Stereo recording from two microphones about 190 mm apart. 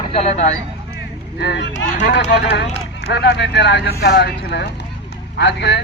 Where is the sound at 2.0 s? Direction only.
65° left (ahead or behind).